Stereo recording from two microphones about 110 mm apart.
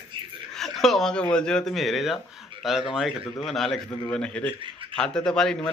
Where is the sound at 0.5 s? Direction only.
Centre (ahead or behind).